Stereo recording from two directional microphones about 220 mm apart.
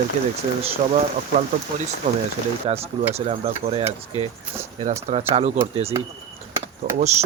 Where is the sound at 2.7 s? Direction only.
30° right (ahead or behind).